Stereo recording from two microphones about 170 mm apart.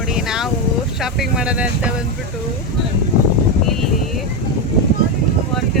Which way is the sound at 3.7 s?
Centre (ahead or behind).